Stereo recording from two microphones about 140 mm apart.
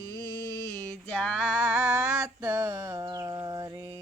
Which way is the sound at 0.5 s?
20° left (ahead or behind).